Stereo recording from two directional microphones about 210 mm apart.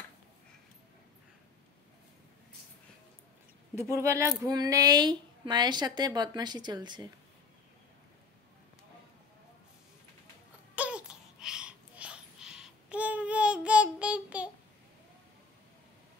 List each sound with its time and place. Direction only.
3.9 s a woman's voice: 15° right (ahead or behind)
10.8 s babbling: 5° right (ahead or behind)